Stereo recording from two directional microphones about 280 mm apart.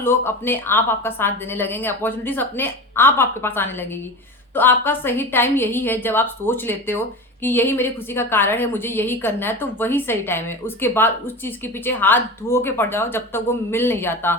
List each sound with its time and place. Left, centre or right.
0.0 s a woman's voice: centre